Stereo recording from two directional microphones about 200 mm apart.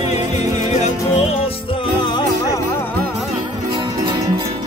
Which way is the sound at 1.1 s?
30° left (ahead or behind).